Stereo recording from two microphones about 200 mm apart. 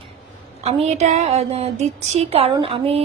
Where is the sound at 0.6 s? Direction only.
30° right (ahead or behind).